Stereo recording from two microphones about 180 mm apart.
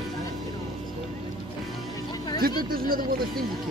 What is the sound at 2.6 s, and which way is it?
Speech, 55° right (ahead or behind).